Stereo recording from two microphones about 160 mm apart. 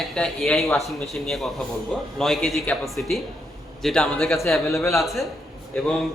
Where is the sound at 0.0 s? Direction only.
Centre (ahead or behind).